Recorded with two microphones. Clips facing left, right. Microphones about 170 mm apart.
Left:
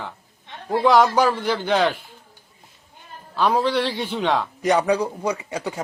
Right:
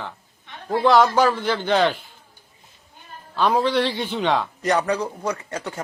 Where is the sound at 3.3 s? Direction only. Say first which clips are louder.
Even; centre (ahead or behind).